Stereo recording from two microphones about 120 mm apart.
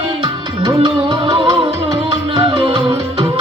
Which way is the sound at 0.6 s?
35° right (ahead or behind).